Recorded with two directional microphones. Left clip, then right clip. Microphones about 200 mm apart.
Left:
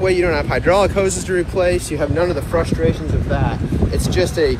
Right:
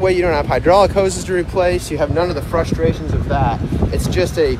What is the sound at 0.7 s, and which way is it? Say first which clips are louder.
Speech: right 3 dB; 60° right (ahead or behind).